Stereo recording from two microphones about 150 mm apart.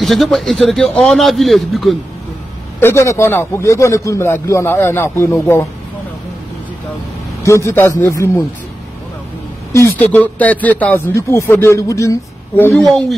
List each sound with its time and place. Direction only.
0.0 s a man's voice: centre (ahead or behind)
2.8 s a man's voice: 15° left (ahead or behind)
7.4 s a man's voice: 20° left (ahead or behind)
9.7 s a man's voice: 15° left (ahead or behind)